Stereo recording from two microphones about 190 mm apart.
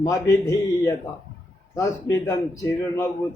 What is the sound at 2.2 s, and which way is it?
Speech, 15° left (ahead or behind).